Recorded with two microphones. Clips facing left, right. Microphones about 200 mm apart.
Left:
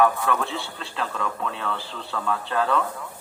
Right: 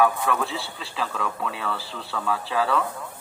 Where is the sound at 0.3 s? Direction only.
Centre (ahead or behind).